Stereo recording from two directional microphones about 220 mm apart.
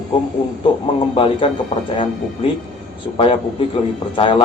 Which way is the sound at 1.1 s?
25° left (ahead or behind).